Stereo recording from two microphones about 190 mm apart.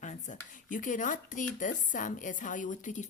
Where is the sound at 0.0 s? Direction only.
40° left (ahead or behind).